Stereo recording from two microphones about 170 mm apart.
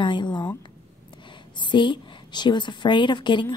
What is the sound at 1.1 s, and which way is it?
A woman's voice, 30° left (ahead or behind).